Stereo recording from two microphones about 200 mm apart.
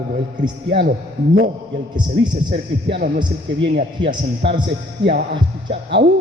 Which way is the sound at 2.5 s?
50° right (ahead or behind).